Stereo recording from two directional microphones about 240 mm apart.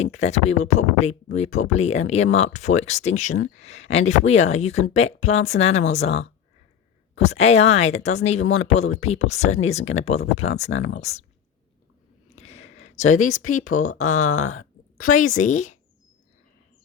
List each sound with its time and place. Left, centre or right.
0.0 s speech: left
12.4 s a sound: left
13.1 s speech: left
13.9 s speech: left
14.3 s speech: left
15.0 s speech: left